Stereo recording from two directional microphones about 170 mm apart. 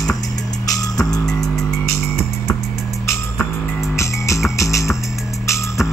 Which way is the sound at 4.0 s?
15° left (ahead or behind).